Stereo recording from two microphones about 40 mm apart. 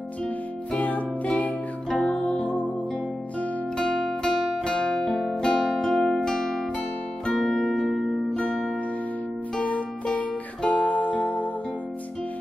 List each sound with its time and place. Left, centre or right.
0.7 s music: left
3.7 s music: centre
9.6 s music: left